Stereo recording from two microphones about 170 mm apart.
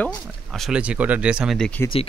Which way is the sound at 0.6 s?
5° right (ahead or behind).